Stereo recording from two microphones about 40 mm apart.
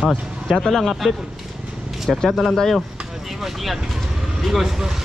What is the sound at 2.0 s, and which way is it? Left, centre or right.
Speech, centre.